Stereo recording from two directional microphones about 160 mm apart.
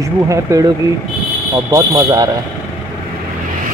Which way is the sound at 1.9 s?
25° right (ahead or behind).